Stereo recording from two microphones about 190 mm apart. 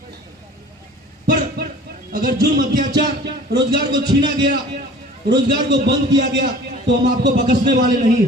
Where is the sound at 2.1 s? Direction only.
45° right (ahead or behind).